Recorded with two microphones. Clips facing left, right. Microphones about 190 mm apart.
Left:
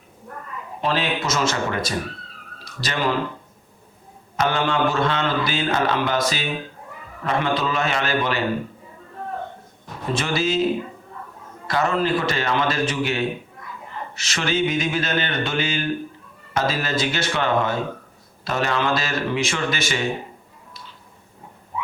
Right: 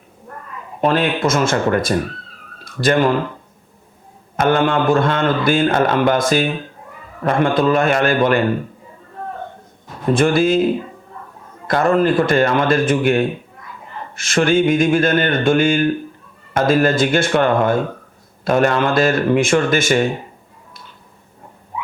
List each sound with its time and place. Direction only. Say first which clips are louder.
0.8 s speech: right 7 dB; 50° right (ahead or behind)
4.4 s speech: right 6 dB; 50° right (ahead or behind)
10.1 s speech: right 9 dB; 50° right (ahead or behind)
11.7 s speech: right 6 dB; 50° right (ahead or behind)